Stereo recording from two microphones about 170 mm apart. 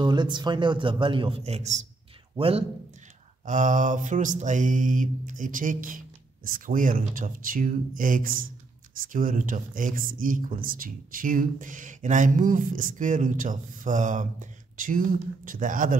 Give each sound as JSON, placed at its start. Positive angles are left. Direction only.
{"t": 0.0, "sound": "a man's voice", "side_deg": -25}
{"t": 3.4, "sound": "speech", "side_deg": -45}